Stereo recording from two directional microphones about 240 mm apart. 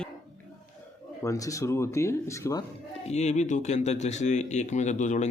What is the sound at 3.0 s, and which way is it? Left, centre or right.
Speech, left.